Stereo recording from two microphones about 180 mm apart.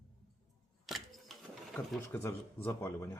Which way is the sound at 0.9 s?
Centre (ahead or behind).